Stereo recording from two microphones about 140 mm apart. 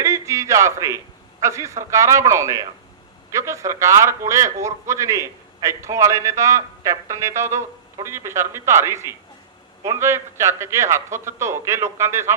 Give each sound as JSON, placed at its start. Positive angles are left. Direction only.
{"t": 0.0, "sound": "a man's voice", "side_deg": -20}